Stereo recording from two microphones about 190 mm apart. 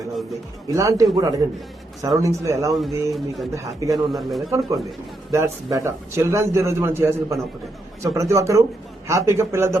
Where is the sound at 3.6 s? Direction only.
15° right (ahead or behind).